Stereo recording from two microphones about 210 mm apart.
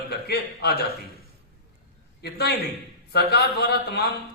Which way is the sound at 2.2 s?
50° left (ahead or behind).